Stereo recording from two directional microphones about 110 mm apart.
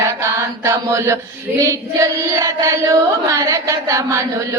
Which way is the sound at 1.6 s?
30° right (ahead or behind).